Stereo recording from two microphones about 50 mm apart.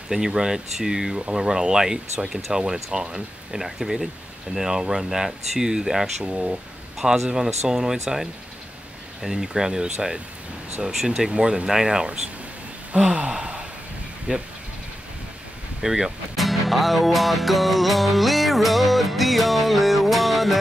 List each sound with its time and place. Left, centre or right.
0.1 s speech: centre
13.1 s gasp: centre
14.3 s speech: right
15.8 s speech: centre